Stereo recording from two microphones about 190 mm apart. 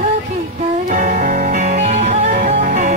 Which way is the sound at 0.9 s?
45° right (ahead or behind).